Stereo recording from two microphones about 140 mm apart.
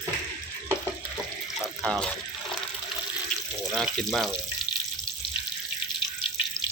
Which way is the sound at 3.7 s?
Centre (ahead or behind).